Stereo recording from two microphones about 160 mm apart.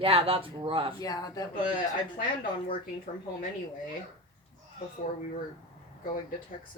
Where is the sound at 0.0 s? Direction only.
35° right (ahead or behind).